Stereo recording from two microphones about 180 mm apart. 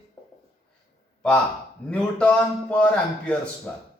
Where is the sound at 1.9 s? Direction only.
5° left (ahead or behind).